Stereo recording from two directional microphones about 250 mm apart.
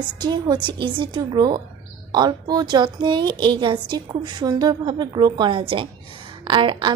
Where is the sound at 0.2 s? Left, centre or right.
Centre.